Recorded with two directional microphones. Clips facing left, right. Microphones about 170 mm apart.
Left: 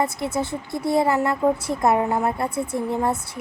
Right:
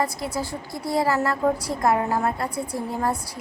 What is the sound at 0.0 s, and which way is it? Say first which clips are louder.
A woman's voice: left 3 dB; 25° left (ahead or behind).